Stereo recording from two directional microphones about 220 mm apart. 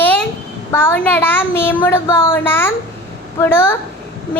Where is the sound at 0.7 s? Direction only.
10° left (ahead or behind).